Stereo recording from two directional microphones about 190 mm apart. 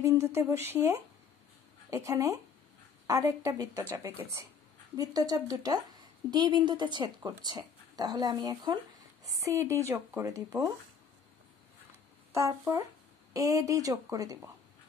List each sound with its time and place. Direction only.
0.0 s speech: 15° right (ahead or behind)
4.9 s a woman's voice: 20° right (ahead or behind)
12.3 s speech: 15° right (ahead or behind)